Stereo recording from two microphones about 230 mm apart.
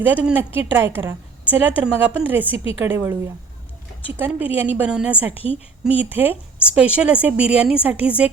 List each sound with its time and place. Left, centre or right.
0.0 s a woman's voice: centre
4.2 s a woman's voice: centre
5.3 s a woman's voice: left
5.8 s a woman's voice: centre